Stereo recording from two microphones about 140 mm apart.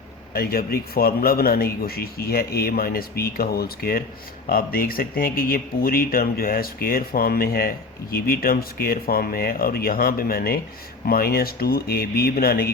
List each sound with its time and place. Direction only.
0.3 s a man's voice: 90° left